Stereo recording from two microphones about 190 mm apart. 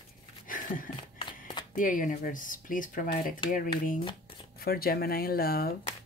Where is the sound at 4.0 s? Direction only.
25° left (ahead or behind).